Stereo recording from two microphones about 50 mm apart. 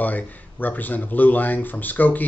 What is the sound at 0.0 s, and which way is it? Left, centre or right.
Speech, left.